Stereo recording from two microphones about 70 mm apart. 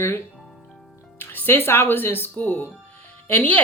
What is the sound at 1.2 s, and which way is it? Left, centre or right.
Speech, left.